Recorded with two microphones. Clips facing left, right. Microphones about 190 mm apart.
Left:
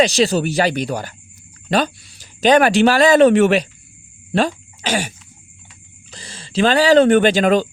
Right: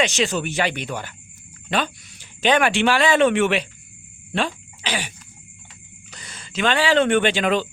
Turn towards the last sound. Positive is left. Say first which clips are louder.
# left 6 dB
turn(degrees=40)  # may be behind; listen again after turning